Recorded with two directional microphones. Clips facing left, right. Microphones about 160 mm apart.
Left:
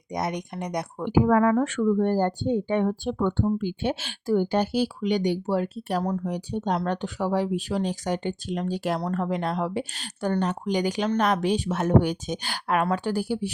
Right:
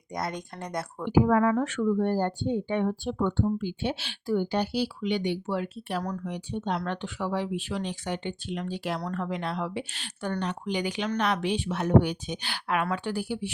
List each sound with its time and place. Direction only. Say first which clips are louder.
0.1 s speech: left 4 dB; 20° left (ahead or behind)
1.1 s speech: left 2 dB; 50° left (ahead or behind)
6.0 s speech: left 6 dB; 30° left (ahead or behind)
6.3 s speech: left 4 dB; 40° left (ahead or behind)